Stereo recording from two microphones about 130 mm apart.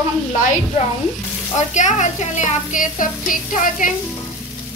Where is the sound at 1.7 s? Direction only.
65° left (ahead or behind); by 3.9 s 90° left.